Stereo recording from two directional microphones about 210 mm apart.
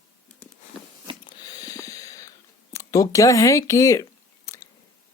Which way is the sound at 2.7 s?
15° left (ahead or behind).